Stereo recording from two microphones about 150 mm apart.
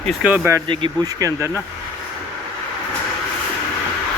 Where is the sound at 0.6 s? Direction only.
30° right (ahead or behind).